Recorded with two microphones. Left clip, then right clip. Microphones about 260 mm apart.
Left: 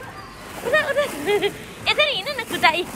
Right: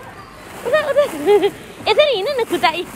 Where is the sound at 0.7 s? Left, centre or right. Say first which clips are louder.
Right 4 dB; centre.